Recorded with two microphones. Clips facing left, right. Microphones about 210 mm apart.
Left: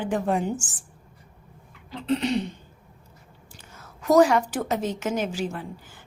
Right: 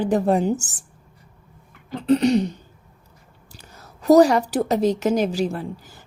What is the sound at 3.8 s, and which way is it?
Speech, 35° right (ahead or behind).